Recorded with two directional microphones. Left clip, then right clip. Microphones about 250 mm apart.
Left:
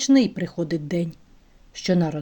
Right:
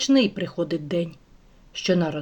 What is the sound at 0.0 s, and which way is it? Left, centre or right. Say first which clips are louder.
Speech: left 1 dB; left.